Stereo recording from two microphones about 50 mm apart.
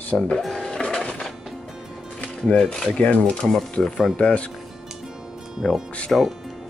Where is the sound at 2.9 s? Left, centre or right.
Left.